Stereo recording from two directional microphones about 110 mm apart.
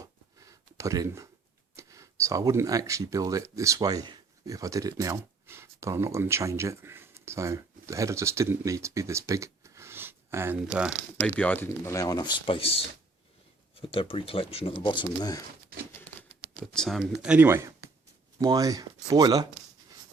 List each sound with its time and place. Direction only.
0.0 s a sound: 30° right (ahead or behind)
1.7 s speech: 30° right (ahead or behind); by 10.9 s 15° right (ahead or behind)
11.3 s speech: 15° left (ahead or behind)
11.9 s speech: 35° left (ahead or behind); by 12.7 s 55° left (ahead or behind)
13.8 s speech: 55° left (ahead or behind); by 15.4 s 35° left (ahead or behind)
16.6 s speech: 5° left (ahead or behind)
17.3 s speech: 20° right (ahead or behind)